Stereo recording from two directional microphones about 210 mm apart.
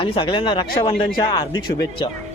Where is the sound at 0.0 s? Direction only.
25° left (ahead or behind).